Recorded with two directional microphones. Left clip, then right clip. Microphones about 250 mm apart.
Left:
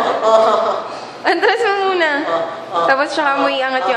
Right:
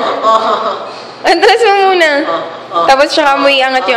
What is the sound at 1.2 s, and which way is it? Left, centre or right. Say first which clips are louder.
A woman's voice: right 7 dB; right.